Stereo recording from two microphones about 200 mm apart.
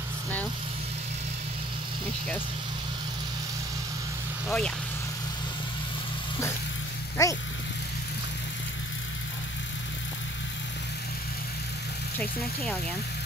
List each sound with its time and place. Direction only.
4.5 s speech: 5° left (ahead or behind)
7.2 s vehicle: 15° left (ahead or behind)